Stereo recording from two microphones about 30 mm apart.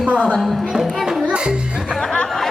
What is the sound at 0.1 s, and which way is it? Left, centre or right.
Speech, right.